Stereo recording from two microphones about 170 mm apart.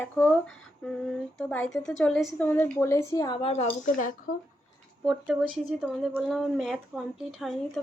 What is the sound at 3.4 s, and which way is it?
Speech, 35° left (ahead or behind).